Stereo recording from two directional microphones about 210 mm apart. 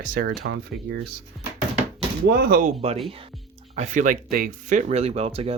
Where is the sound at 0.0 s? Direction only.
45° right (ahead or behind).